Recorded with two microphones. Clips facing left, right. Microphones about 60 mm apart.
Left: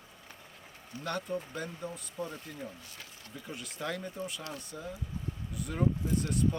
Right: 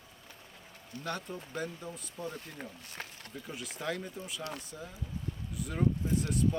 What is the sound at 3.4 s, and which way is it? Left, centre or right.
Speech, centre.